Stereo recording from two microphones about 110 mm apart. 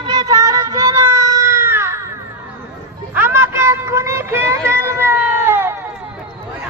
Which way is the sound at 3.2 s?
20° right (ahead or behind).